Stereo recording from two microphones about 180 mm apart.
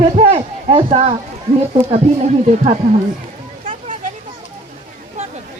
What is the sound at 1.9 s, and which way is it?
Speech, 35° right (ahead or behind).